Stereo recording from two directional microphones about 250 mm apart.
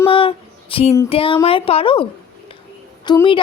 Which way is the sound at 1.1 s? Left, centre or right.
Left.